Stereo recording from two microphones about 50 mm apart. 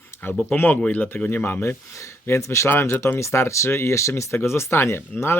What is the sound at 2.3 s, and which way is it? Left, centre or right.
Speech, left.